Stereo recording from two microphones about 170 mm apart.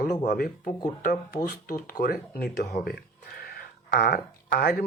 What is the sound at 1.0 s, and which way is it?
Speech, 60° left (ahead or behind).